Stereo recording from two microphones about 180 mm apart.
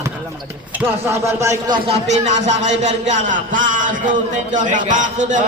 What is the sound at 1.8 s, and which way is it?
A man's voice, 40° right (ahead or behind).